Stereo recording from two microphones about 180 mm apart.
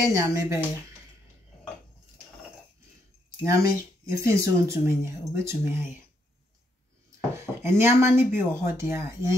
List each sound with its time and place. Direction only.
0.0 s speech: 15° right (ahead or behind)
3.4 s speech: 15° right (ahead or behind)
7.3 s speech: 15° right (ahead or behind)